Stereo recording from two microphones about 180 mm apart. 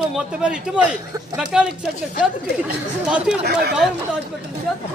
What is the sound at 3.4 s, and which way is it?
Speech, 65° right (ahead or behind).